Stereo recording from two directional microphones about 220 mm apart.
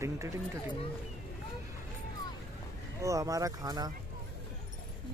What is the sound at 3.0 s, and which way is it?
Speech, 15° right (ahead or behind).